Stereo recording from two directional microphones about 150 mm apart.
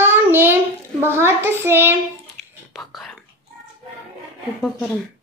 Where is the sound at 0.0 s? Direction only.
15° right (ahead or behind).